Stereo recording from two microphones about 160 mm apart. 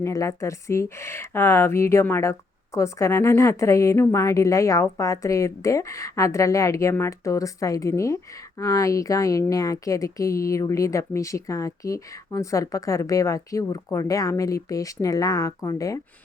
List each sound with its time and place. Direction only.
0.0 s a woman's voice: 20° left (ahead or behind)